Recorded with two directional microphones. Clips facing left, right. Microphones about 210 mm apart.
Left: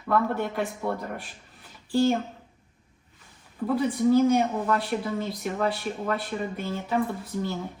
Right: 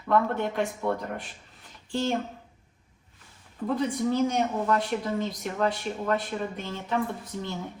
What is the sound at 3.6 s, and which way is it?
Speech, 5° left (ahead or behind).